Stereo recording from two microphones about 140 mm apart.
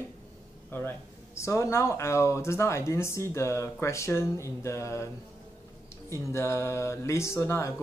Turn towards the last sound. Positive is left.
turn(degrees=20)  # may be behind; listen again after turning